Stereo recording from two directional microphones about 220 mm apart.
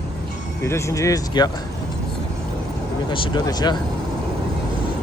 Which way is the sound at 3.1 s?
20° left (ahead or behind).